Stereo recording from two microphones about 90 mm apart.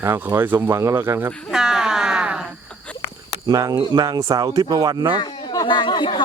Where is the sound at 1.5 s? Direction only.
5° right (ahead or behind).